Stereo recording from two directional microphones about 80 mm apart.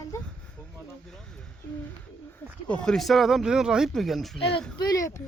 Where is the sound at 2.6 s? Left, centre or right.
Centre.